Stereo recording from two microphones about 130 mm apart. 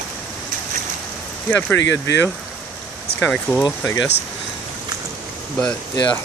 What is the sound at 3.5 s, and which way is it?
Speech, 10° left (ahead or behind).